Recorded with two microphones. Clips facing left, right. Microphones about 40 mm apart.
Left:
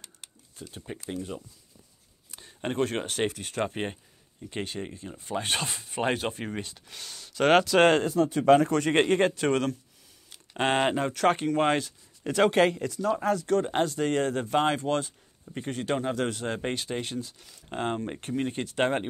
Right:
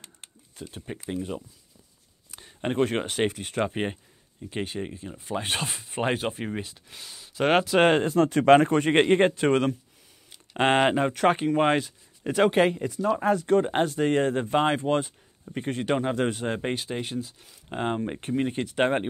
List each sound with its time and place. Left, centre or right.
0.0 s a sound: right
1.0 s speech: centre
2.6 s speech: centre
3.1 s speech: right
3.6 s speech: centre
4.4 s speech: centre; by 6.2 s right
6.4 s speech: centre
8.0 s speech: right
8.7 s speech: right
13.5 s speech: right
16.4 s speech: centre